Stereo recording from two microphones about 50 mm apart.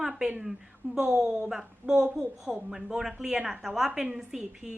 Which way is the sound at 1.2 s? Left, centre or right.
Centre.